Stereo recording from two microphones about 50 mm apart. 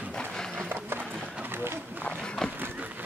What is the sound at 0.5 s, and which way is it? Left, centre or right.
Horse, right.